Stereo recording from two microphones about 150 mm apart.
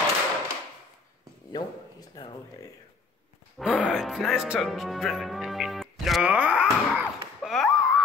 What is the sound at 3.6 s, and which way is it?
Speech, 5° right (ahead or behind).